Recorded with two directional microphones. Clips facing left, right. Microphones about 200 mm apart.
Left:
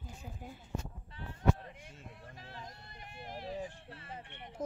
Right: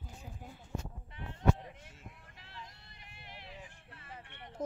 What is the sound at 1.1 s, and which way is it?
Bleat, 15° right (ahead or behind).